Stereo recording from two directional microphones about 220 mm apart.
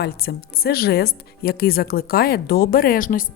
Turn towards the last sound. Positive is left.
turn(degrees=40)  # may be behind; listen again after turning